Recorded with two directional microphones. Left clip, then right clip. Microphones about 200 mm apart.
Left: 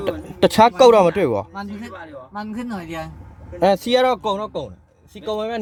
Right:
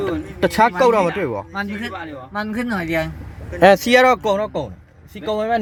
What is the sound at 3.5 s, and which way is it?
Speech, centre (ahead or behind).